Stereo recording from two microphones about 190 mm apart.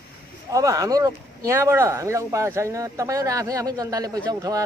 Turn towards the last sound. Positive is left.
turn(degrees=-20)  # may be behind; listen again after turning